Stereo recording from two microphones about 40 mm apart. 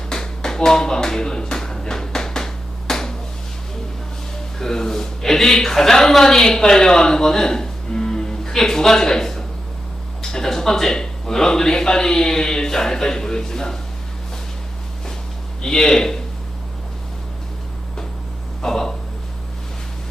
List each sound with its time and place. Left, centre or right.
0.1 s a sound: centre
4.5 s speech: centre
15.6 s speech: centre
18.6 s speech: centre